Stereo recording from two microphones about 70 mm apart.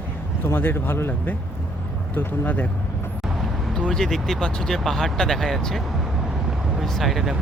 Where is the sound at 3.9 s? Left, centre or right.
Centre.